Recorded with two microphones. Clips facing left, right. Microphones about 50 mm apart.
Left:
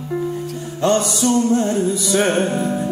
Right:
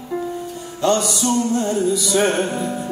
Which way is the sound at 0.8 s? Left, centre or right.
Left.